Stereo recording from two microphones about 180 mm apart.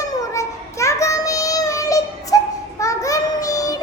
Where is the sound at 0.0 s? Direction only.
15° left (ahead or behind).